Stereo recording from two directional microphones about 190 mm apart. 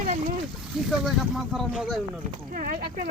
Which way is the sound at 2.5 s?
50° right (ahead or behind).